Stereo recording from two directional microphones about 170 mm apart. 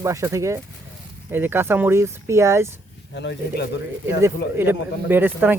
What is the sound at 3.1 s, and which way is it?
Speech, 90° left.